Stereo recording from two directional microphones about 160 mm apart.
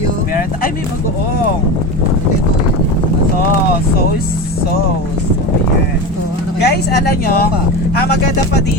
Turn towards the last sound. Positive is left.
turn(degrees=70)  # may be behind; listen again after turning